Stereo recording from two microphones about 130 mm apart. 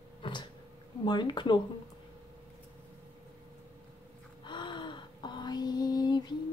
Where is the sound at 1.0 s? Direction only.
35° left (ahead or behind).